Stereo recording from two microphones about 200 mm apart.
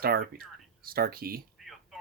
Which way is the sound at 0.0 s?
50° right (ahead or behind).